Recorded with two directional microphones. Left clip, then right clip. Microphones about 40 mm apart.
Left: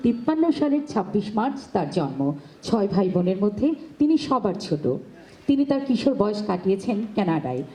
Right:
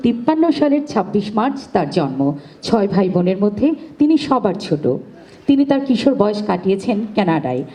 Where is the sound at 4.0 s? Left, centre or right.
Right.